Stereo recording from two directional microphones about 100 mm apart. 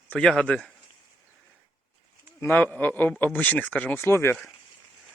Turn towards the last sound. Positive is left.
turn(degrees=25)  # may be behind; listen again after turning